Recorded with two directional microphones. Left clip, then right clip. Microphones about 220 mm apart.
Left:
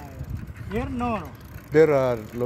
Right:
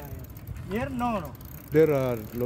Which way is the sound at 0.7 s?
20° right (ahead or behind).